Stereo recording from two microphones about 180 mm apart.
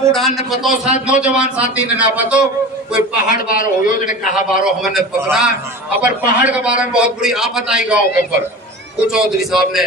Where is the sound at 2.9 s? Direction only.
55° left (ahead or behind).